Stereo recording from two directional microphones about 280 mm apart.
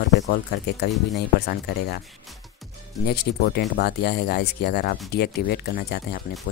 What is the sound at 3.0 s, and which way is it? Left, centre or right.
Speech, left.